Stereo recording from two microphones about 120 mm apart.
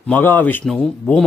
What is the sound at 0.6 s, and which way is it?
Speech, 5° left (ahead or behind).